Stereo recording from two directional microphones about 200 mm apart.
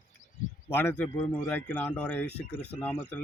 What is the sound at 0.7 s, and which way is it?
Speech, 10° left (ahead or behind).